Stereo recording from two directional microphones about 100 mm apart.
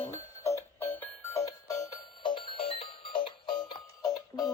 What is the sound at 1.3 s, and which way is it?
Music, 35° left (ahead or behind).